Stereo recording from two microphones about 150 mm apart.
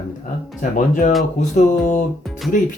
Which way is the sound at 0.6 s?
60° left (ahead or behind).